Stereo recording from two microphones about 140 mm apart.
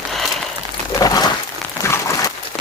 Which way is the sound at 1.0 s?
25° left (ahead or behind).